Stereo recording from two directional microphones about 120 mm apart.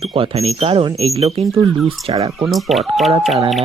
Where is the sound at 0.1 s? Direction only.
55° right (ahead or behind).